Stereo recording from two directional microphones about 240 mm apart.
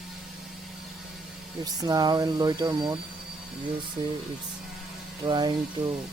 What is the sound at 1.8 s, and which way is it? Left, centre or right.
Speech, centre.